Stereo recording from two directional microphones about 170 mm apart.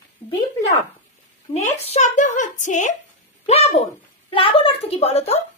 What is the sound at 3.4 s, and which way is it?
A woman's voice, 35° left (ahead or behind).